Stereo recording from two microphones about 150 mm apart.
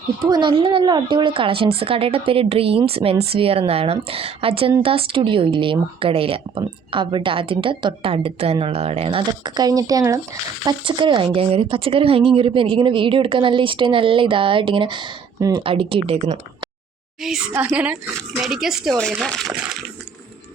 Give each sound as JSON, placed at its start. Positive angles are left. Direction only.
{"t": 0.3, "sound": "speech", "side_deg": -30}
{"t": 10.7, "sound": "speech", "side_deg": -30}
{"t": 15.6, "sound": "speech", "side_deg": -35}
{"t": 17.2, "sound": "a woman's voice", "side_deg": -5}